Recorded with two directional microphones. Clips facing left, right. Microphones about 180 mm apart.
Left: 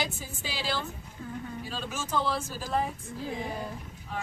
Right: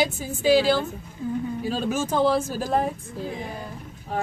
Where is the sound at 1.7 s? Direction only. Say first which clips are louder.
Right 9 dB; 45° right (ahead or behind).